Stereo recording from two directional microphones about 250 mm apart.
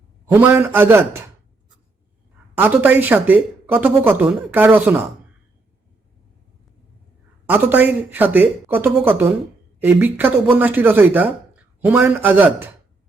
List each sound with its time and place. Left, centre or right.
0.3 s speech: centre
2.6 s speech: centre
7.4 s speech: centre